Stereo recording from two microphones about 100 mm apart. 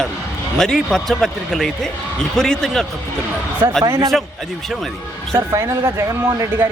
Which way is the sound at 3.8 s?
35° right (ahead or behind).